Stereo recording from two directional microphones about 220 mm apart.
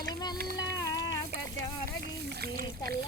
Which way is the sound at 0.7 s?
15° left (ahead or behind).